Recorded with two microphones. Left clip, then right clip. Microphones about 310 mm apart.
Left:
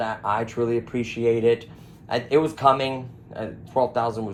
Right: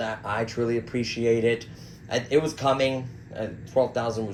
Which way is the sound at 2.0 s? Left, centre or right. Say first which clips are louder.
Left 2 dB; centre.